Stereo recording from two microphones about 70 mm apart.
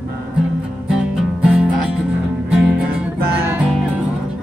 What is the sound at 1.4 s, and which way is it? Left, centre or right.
Music, centre.